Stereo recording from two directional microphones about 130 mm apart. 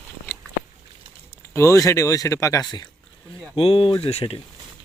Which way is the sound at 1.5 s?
25° left (ahead or behind).